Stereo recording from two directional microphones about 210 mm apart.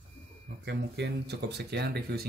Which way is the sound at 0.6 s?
50° right (ahead or behind).